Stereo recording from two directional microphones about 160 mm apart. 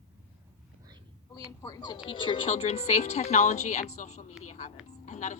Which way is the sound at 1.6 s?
25° left (ahead or behind).